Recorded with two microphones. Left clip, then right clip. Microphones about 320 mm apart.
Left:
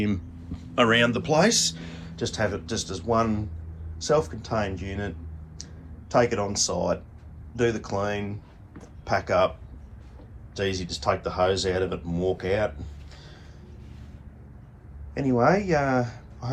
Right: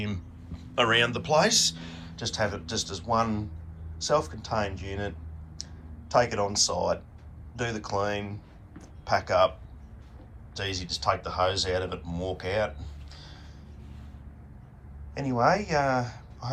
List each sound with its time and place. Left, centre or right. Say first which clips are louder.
0.8 s speech: left 3 dB; centre
10.5 s speech: left 4 dB; centre
15.1 s speech: left 3 dB; centre